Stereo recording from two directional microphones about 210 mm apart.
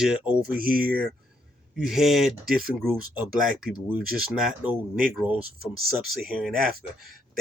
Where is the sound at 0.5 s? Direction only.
45° right (ahead or behind).